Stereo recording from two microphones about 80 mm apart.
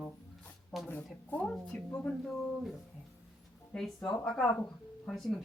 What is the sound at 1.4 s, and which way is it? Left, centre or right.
Speech, centre.